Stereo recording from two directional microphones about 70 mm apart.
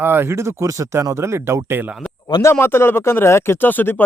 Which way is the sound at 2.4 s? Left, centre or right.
Left.